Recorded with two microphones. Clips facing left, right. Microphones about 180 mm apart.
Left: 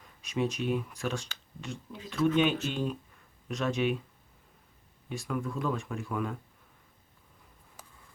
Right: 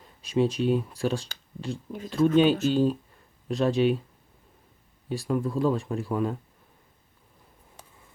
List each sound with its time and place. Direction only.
0.0 s speech: 30° right (ahead or behind)
5.0 s speech: 35° right (ahead or behind)